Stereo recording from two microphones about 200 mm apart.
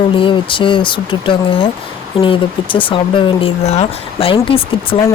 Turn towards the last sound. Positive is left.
turn(degrees=25)  # may be behind; listen again after turning